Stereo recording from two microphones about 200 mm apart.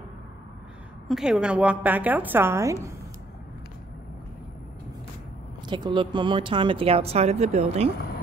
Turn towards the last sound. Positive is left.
turn(degrees=-30)  # may be behind; listen again after turning